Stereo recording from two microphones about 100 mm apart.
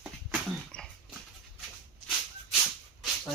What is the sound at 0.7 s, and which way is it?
Dog, 10° left (ahead or behind).